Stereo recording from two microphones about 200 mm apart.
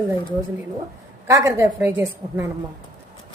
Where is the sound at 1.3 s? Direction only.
15° right (ahead or behind).